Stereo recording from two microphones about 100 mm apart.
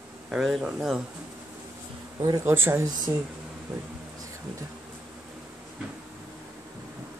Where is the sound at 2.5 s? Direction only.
25° right (ahead or behind).